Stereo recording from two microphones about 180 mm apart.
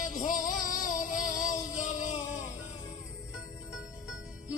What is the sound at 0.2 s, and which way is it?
Music, 45° left (ahead or behind).